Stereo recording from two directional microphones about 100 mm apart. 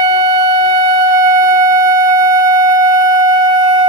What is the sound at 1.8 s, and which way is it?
Music, 30° right (ahead or behind).